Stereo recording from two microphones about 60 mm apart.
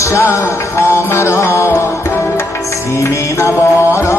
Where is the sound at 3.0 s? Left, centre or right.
Left.